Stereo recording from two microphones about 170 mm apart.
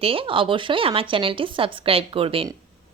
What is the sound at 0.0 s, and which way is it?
A woman's voice, 30° right (ahead or behind).